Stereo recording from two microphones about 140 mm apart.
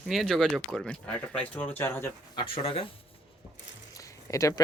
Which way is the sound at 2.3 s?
40° left (ahead or behind).